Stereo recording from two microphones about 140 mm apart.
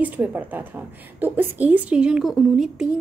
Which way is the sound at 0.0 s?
10° right (ahead or behind).